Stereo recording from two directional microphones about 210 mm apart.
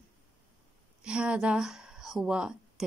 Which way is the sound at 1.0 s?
5° right (ahead or behind).